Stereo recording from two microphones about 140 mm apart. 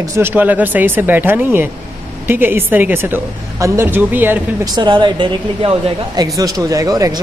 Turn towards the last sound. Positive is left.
turn(degrees=-25)  # may be behind; listen again after turning